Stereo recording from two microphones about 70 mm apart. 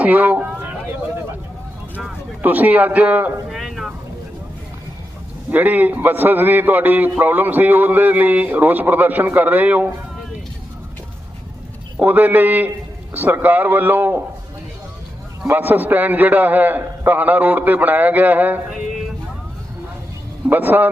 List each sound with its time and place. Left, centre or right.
0.0 s a man's voice: right
2.4 s a man's voice: right
3.5 s vehicle: centre
5.5 s a man's voice: right
11.9 s a man's voice: right
15.4 s a man's voice: right
20.5 s a man's voice: right